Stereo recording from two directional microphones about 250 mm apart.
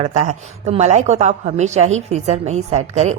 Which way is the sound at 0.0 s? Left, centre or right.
Right.